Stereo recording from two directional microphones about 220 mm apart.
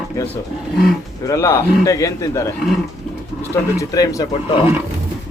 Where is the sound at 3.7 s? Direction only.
15° left (ahead or behind).